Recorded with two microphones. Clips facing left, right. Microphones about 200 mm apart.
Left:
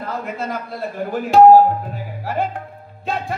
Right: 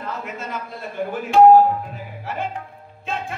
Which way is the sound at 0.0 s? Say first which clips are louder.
Left 4 dB; 40° left (ahead or behind).